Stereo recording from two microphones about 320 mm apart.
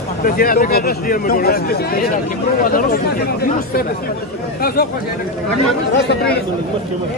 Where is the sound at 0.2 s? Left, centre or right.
Left.